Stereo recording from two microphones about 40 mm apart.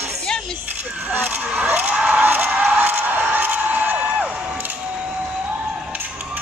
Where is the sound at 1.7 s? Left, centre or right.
Right.